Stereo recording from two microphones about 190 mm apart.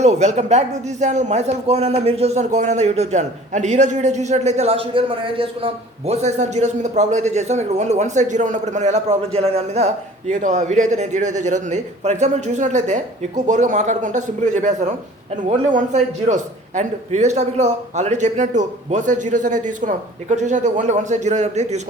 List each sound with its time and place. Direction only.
0.0 s speech: 35° right (ahead or behind)